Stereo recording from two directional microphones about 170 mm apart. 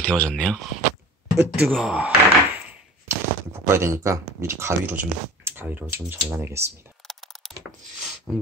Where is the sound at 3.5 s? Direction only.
15° right (ahead or behind).